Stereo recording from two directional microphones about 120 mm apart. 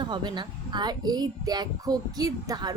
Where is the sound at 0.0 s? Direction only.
40° right (ahead or behind).